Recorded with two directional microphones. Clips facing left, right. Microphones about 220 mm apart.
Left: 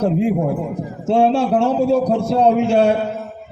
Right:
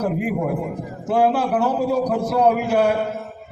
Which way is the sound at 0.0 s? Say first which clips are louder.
Left 5 dB; 25° left (ahead or behind).